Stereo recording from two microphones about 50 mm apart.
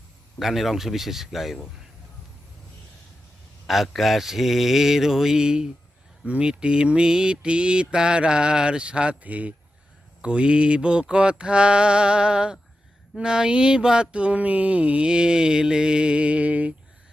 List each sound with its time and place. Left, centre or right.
0.3 s mantra: centre
3.7 s mantra: centre
13.1 s a sound: centre